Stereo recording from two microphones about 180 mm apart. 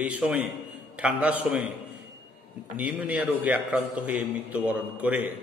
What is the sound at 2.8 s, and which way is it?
A man's voice, 5° right (ahead or behind).